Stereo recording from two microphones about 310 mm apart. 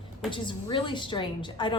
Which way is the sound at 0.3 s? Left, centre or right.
Centre.